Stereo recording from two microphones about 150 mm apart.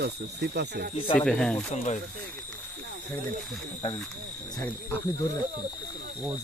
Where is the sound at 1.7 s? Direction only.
55° left (ahead or behind).